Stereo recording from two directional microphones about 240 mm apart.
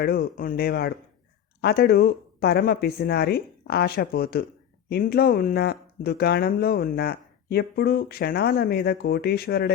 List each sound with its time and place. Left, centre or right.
0.0 s speech: left